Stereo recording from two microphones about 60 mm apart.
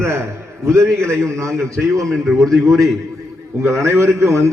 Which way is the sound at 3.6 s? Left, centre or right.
Right.